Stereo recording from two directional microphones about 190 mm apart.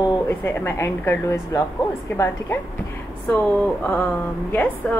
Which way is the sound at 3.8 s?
10° left (ahead or behind).